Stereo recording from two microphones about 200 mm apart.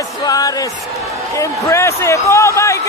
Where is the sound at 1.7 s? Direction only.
15° left (ahead or behind).